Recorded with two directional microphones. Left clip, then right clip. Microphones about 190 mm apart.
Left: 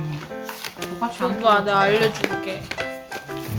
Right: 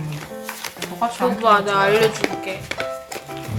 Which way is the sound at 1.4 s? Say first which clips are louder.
Right 1 dB; 5° left (ahead or behind).